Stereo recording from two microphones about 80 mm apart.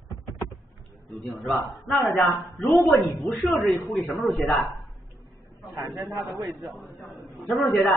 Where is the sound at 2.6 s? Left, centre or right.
Centre.